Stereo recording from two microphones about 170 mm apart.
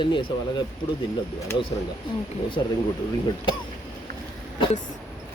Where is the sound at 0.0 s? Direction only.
30° left (ahead or behind).